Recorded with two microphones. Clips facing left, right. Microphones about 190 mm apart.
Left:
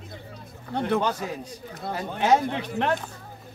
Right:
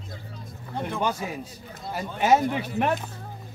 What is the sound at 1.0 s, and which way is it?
Speech, 10° right (ahead or behind).